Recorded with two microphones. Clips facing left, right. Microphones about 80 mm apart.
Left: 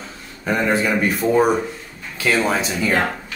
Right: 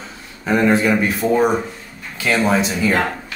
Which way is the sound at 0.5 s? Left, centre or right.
Centre.